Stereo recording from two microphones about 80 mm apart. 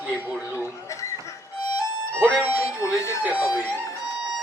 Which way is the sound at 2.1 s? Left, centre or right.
Right.